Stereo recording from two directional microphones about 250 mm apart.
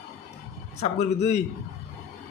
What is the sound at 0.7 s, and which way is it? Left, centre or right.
Speech, left.